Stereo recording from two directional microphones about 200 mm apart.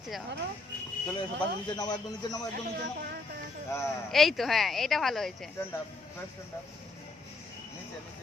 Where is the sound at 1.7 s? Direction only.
20° left (ahead or behind).